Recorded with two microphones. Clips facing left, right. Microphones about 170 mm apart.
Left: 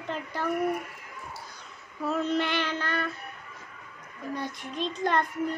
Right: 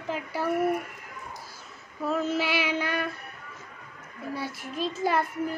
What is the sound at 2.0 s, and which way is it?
Child singing, centre (ahead or behind).